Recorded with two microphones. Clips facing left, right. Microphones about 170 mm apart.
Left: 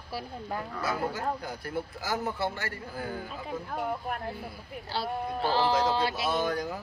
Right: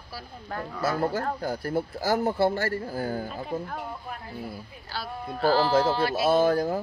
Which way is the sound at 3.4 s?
Centre (ahead or behind).